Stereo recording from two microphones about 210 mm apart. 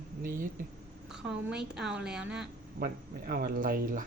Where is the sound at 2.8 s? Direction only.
45° right (ahead or behind).